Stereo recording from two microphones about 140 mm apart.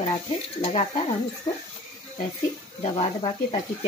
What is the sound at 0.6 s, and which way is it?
Speech, 45° left (ahead or behind).